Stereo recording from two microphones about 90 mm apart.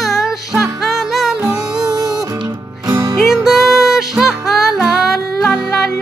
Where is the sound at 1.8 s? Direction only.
40° right (ahead or behind).